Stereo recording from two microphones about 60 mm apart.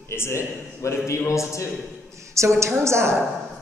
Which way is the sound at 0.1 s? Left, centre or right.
Left.